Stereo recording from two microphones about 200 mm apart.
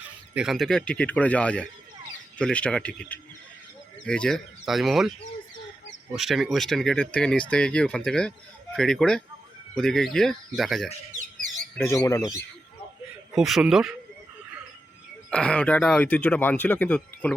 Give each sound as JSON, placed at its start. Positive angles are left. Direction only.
{"t": 0.3, "sound": "speech", "side_deg": 0}
{"t": 6.1, "sound": "speech", "side_deg": 0}
{"t": 11.8, "sound": "speech", "side_deg": 15}
{"t": 13.3, "sound": "speech", "side_deg": 0}
{"t": 15.3, "sound": "speech", "side_deg": 5}